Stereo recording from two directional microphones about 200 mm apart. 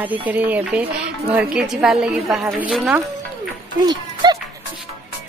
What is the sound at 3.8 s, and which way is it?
Music, 20° right (ahead or behind).